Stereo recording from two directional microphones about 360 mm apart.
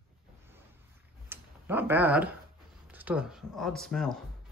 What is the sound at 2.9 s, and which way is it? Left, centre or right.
Speech, centre.